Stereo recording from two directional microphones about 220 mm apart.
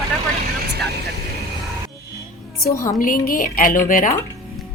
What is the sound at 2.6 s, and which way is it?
Speech, 15° left (ahead or behind).